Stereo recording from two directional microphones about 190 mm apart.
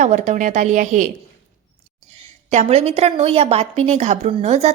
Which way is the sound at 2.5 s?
35° right (ahead or behind).